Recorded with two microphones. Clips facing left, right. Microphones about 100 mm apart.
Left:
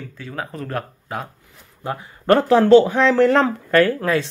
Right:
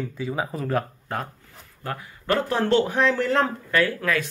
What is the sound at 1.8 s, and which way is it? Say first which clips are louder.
Speech: left 5 dB; 20° left (ahead or behind).